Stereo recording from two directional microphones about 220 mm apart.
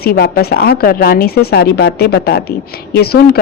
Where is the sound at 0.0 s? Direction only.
45° left (ahead or behind).